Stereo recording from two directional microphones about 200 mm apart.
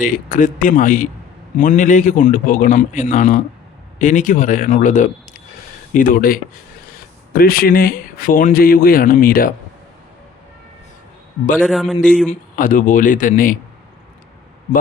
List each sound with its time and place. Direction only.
0.0 s a man's voice: 40° left (ahead or behind)
11.6 s a man's voice: centre (ahead or behind)
12.3 s a man's voice: 40° left (ahead or behind)